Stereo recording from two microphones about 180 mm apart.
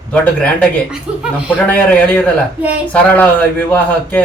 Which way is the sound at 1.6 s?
10° left (ahead or behind).